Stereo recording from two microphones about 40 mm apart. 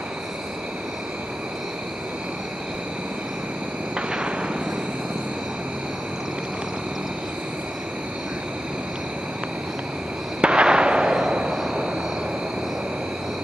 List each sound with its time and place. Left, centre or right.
3.9 s vehicle: right
10.4 s fireworks: right
11.5 s vehicle: centre